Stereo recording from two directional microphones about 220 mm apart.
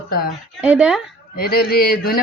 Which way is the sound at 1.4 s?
45° left (ahead or behind).